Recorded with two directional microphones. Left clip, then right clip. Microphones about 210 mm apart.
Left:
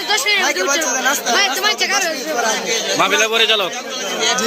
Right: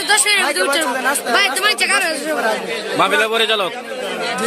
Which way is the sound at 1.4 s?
50° right (ahead or behind).